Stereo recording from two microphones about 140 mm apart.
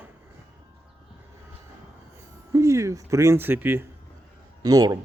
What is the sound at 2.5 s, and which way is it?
Speech, 20° right (ahead or behind).